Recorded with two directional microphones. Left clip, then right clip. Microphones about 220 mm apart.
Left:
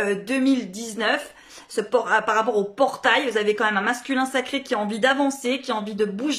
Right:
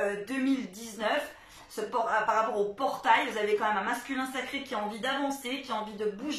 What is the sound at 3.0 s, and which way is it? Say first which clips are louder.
Speech: left 2 dB; 45° left (ahead or behind).